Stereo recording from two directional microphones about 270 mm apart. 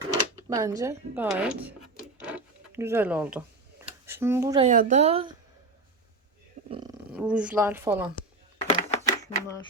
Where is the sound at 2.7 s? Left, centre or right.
Centre.